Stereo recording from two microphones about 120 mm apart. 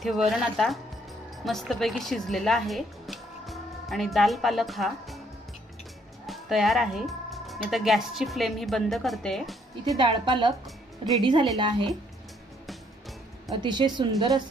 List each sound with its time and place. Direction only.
0.0 s a woman's voice: centre (ahead or behind)
6.2 s speech: centre (ahead or behind)
9.8 s a woman's voice: 40° right (ahead or behind)
13.6 s a woman's voice: 40° right (ahead or behind)